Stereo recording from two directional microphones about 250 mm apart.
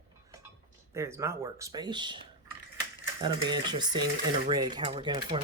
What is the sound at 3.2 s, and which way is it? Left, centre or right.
Speech, centre.